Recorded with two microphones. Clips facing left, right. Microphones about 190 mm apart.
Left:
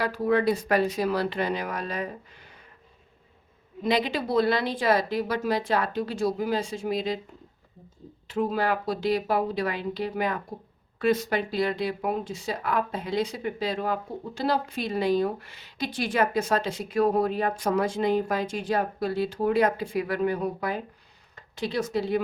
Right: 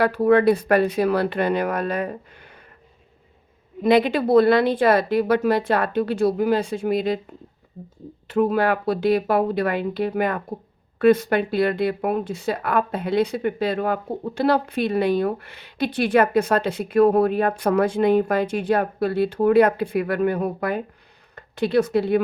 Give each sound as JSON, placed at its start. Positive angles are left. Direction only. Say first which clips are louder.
{"t": 0.0, "sound": "speech", "louder": "right 7 dB", "side_deg": -60}
{"t": 3.8, "sound": "speech", "louder": "right 8 dB", "side_deg": -55}
{"t": 8.3, "sound": "speech", "louder": "right 6 dB", "side_deg": -60}